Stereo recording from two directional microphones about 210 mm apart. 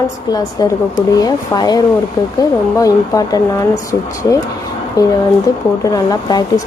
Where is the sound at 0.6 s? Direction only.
15° left (ahead or behind).